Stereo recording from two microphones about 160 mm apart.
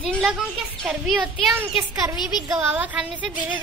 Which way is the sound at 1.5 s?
15° right (ahead or behind).